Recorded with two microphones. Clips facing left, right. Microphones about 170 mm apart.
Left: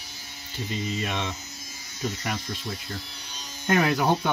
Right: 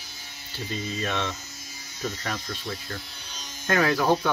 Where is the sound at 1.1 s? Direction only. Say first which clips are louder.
Right 2 dB; 15° left (ahead or behind).